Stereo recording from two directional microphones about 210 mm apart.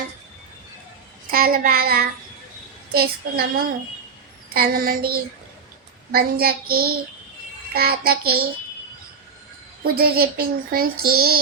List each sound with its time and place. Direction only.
1.3 s child singing: 45° right (ahead or behind)
10.0 s child singing: 45° right (ahead or behind)